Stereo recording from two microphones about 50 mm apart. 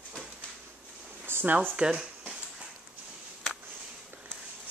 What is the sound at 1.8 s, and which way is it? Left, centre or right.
Speech, centre.